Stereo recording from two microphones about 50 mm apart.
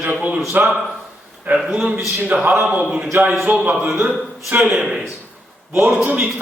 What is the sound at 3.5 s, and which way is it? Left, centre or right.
Speech, right.